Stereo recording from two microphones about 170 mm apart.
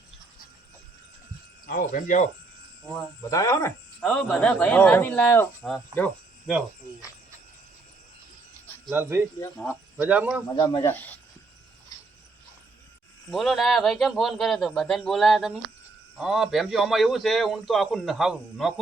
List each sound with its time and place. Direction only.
1.6 s speech: 55° left (ahead or behind)
3.2 s speech: 20° left (ahead or behind)
4.0 s a man's voice: 5° left (ahead or behind)
8.9 s speech: 15° right (ahead or behind)
10.8 s speech: 10° left (ahead or behind)
13.3 s a man's voice: centre (ahead or behind)